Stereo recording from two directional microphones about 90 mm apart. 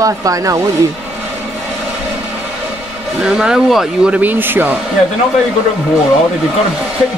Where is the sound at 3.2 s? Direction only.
5° right (ahead or behind).